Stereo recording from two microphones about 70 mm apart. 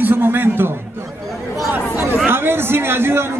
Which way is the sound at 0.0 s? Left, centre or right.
Right.